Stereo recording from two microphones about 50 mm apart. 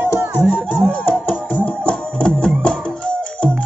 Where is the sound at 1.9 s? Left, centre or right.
Centre.